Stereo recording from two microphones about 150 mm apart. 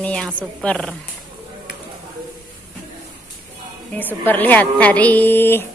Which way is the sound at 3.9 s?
10° left (ahead or behind).